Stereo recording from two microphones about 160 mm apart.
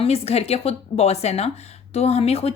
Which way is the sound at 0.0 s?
40° left (ahead or behind).